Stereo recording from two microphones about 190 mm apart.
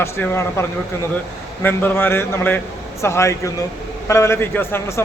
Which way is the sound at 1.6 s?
10° left (ahead or behind).